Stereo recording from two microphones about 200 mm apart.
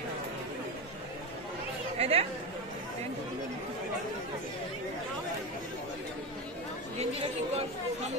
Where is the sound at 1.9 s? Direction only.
30° right (ahead or behind).